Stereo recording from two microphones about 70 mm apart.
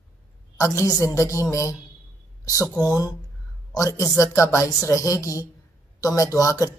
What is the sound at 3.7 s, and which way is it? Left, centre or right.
Speech, left.